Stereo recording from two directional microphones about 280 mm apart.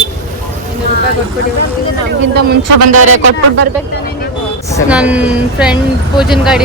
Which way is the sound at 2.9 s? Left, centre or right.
Right.